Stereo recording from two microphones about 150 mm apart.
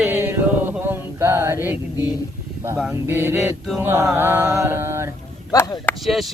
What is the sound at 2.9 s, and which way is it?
Music, 15° right (ahead or behind).